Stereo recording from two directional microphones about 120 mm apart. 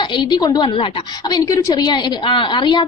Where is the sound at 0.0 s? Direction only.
40° left (ahead or behind).